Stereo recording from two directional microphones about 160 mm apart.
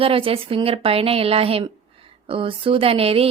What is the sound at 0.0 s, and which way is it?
A woman's voice, 35° right (ahead or behind).